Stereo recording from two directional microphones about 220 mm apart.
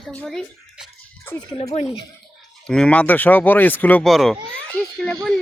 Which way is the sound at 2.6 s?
5° left (ahead or behind).